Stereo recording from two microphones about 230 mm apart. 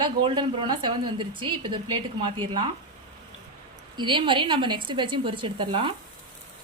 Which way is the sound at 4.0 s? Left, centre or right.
Right.